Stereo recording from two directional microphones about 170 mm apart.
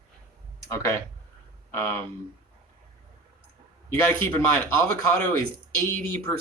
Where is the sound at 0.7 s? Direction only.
15° left (ahead or behind).